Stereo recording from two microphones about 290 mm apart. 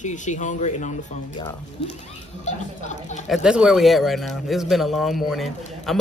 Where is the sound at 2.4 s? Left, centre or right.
Left.